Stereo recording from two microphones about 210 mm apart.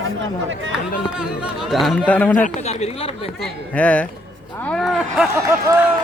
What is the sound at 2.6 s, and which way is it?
Speech, 30° left (ahead or behind).